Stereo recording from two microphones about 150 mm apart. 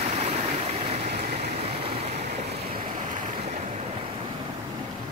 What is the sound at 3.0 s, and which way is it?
Waves, 60° right (ahead or behind).